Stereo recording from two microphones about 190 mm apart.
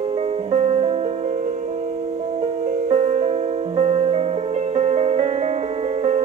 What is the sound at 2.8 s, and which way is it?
Music, 35° right (ahead or behind).